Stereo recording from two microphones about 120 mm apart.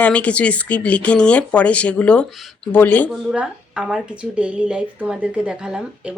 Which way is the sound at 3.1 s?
5° right (ahead or behind).